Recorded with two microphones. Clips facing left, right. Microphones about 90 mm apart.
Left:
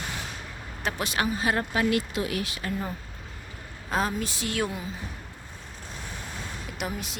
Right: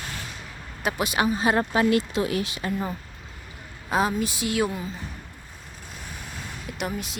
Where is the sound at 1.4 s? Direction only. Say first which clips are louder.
Right 5 dB; 25° right (ahead or behind).